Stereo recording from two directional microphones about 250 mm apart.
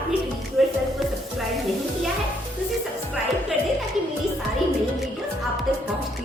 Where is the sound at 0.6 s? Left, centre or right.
Centre.